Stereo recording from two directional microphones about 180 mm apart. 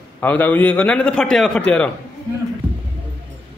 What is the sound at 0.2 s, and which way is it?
A man's voice, 10° left (ahead or behind).